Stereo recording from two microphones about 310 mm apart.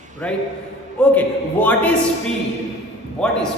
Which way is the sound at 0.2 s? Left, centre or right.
Centre.